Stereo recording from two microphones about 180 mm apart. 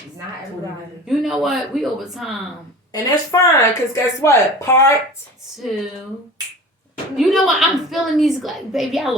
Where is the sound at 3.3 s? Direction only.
20° left (ahead or behind).